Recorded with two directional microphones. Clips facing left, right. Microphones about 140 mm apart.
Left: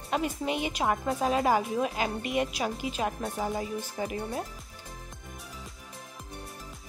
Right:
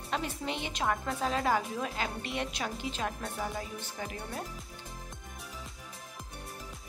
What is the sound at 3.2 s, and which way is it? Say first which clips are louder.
Speech: left 5 dB; 20° left (ahead or behind).